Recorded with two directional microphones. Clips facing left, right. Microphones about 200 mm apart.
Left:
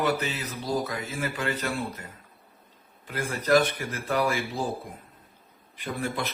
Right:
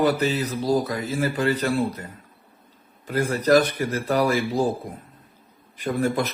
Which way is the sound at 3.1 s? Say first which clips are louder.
Right 5 dB; 40° right (ahead or behind).